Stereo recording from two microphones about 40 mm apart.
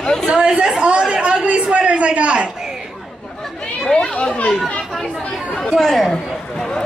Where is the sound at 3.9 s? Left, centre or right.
Left.